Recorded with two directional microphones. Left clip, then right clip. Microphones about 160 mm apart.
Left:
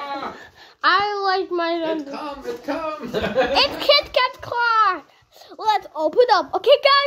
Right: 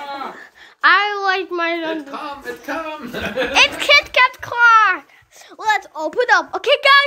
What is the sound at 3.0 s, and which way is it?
A child's voice, 5° right (ahead or behind).